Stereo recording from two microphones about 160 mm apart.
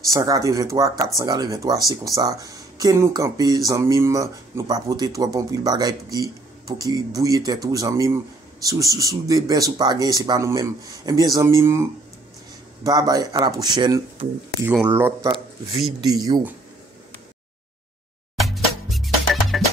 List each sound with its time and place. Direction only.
0.1 s speech: 20° right (ahead or behind)
14.7 s speech: 15° right (ahead or behind)
18.4 s music: centre (ahead or behind)